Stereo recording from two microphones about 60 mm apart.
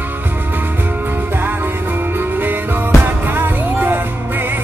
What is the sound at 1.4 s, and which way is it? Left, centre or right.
Music, right.